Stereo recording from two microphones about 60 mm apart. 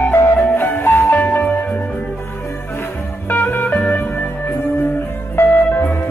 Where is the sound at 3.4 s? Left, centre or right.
Left.